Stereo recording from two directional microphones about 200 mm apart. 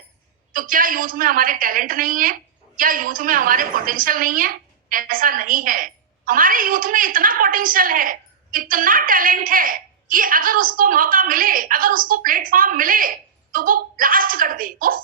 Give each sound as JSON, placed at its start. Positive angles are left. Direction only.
{"t": 0.5, "sound": "a woman's voice", "side_deg": -45}